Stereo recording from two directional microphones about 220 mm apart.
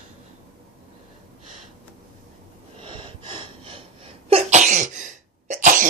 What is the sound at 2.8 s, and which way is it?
Sneeze, 20° right (ahead or behind).